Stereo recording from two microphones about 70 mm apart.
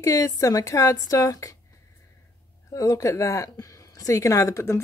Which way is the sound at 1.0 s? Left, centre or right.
Left.